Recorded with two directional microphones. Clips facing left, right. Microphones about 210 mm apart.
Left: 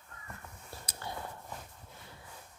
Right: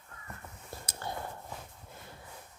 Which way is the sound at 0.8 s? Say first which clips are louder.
Right 2 dB; 50° right (ahead or behind).